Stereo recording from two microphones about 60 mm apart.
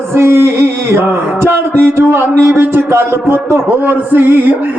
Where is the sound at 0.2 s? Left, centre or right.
Right.